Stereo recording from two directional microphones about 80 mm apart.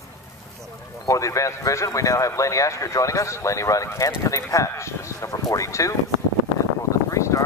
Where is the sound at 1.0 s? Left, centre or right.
Left.